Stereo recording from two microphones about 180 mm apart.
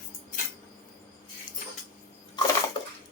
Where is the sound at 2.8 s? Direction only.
25° left (ahead or behind).